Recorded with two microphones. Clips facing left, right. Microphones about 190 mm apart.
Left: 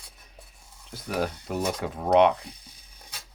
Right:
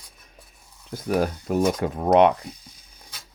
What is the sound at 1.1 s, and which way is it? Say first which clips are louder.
Speech: right 6 dB; 45° right (ahead or behind).